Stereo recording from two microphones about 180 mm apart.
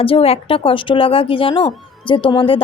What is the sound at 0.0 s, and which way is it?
A woman's voice, 30° left (ahead or behind).